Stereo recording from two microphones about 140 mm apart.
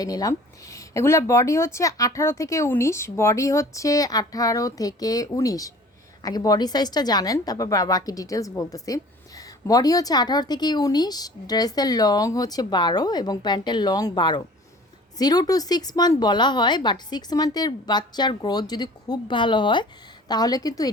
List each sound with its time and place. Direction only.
0.0 s a woman's voice: 25° left (ahead or behind)